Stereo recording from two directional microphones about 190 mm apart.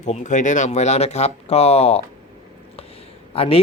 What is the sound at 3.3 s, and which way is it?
Speech, 30° left (ahead or behind).